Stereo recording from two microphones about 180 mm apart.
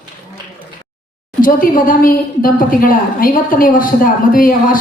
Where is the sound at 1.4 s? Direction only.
50° left (ahead or behind).